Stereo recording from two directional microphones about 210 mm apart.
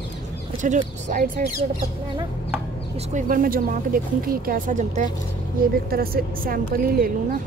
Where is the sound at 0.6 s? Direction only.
35° right (ahead or behind).